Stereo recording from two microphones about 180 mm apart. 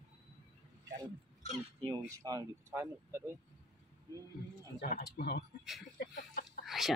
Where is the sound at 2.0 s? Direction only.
15° right (ahead or behind).